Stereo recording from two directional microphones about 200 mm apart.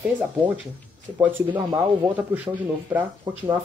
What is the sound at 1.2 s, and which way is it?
Speech, 15° right (ahead or behind).